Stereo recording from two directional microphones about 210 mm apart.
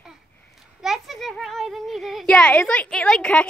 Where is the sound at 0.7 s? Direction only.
Centre (ahead or behind).